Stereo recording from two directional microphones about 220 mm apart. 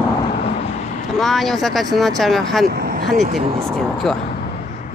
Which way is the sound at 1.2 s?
Centre (ahead or behind).